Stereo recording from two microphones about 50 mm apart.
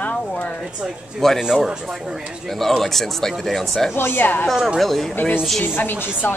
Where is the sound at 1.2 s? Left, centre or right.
Centre.